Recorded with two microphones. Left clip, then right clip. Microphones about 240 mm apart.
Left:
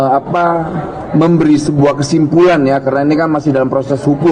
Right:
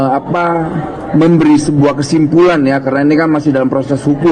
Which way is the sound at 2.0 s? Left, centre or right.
Right.